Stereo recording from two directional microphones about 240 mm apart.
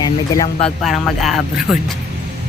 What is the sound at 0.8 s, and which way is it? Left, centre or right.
Speech, centre.